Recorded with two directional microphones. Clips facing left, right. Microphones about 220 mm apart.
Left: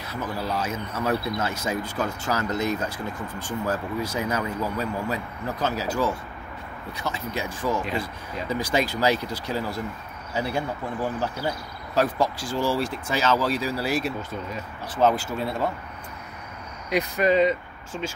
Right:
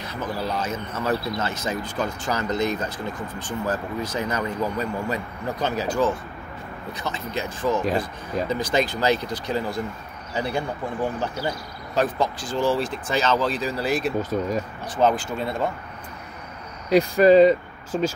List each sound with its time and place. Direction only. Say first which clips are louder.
0.0 s speech: right 2 dB; 5° left (ahead or behind)
16.9 s speech: right 7 dB; 35° right (ahead or behind)